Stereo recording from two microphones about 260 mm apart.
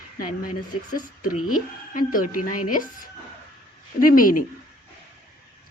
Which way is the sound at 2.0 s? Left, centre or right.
Left.